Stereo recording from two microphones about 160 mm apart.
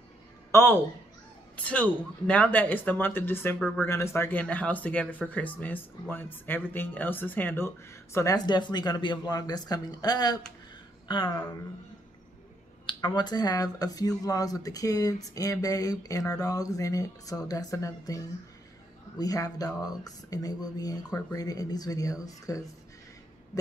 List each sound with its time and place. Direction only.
0.5 s a woman's voice: 15° left (ahead or behind)
3.9 s speech: 15° left (ahead or behind)
12.8 s speech: 30° left (ahead or behind)